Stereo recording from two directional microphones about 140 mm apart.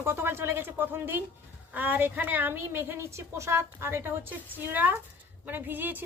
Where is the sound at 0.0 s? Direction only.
15° right (ahead or behind).